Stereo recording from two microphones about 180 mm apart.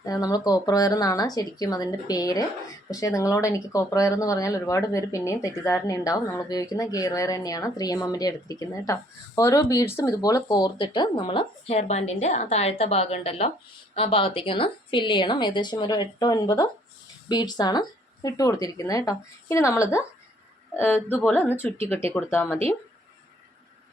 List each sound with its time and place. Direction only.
0.0 s speech: 20° left (ahead or behind)